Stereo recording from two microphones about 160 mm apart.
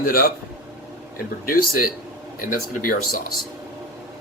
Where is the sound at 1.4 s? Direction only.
65° left (ahead or behind).